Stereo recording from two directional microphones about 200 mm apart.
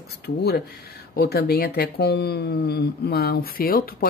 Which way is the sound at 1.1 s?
50° left (ahead or behind).